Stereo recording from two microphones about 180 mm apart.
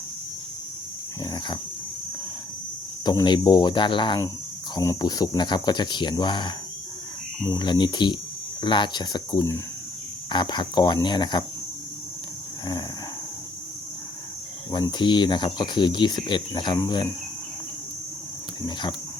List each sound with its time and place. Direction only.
1.2 s speech: 20° left (ahead or behind)
3.0 s speech: 25° left (ahead or behind)
14.7 s speech: 25° left (ahead or behind)